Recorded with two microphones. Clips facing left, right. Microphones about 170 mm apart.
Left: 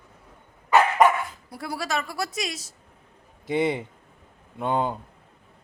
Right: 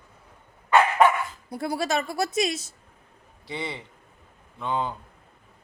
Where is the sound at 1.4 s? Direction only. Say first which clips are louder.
Right 6 dB; 20° right (ahead or behind).